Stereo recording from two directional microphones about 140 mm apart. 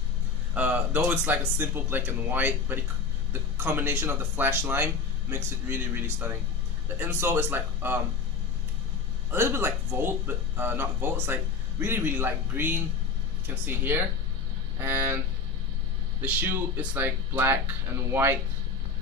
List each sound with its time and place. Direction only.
0.6 s speech: 10° right (ahead or behind)
9.3 s speech: 15° right (ahead or behind)
16.2 s speech: 10° right (ahead or behind)